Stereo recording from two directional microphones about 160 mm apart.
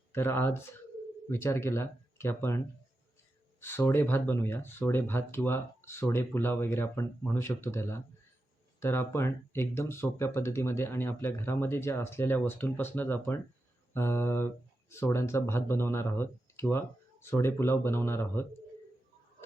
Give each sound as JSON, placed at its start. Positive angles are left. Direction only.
{"t": 0.1, "sound": "speech", "side_deg": 15}
{"t": 3.6, "sound": "speech", "side_deg": 15}